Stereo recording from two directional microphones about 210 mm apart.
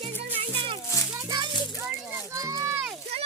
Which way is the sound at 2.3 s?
15° right (ahead or behind).